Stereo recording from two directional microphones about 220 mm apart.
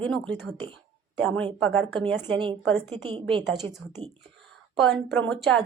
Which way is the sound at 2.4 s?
20° right (ahead or behind).